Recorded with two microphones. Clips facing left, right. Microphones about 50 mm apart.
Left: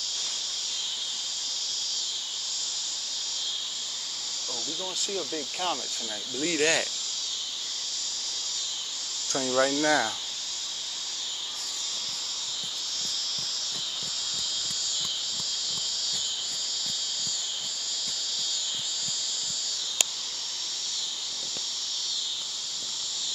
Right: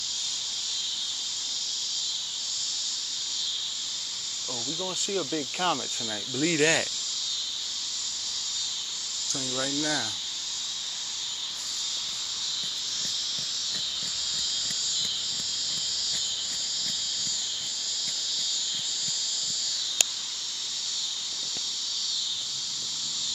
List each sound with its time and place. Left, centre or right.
5.3 s speech: centre
9.3 s cricket: left